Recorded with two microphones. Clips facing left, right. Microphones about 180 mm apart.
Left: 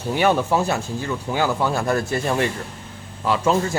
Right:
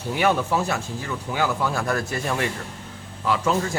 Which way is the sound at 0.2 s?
30° left (ahead or behind).